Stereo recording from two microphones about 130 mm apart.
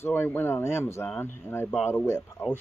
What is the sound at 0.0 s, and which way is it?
Speech, 15° left (ahead or behind).